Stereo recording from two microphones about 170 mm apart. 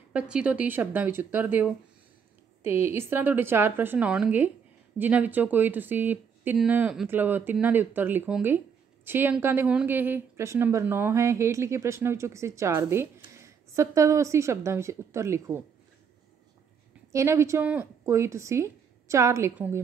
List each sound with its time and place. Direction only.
0.1 s a woman's voice: 5° right (ahead or behind)
17.1 s a woman's voice: 15° right (ahead or behind)